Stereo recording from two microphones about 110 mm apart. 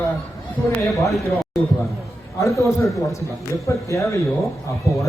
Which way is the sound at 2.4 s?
30° left (ahead or behind).